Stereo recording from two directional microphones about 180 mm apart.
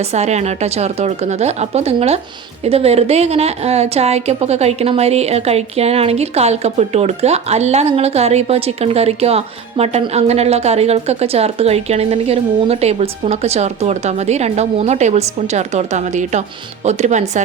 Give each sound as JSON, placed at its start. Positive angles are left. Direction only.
{"t": 0.0, "sound": "a woman's voice", "side_deg": -35}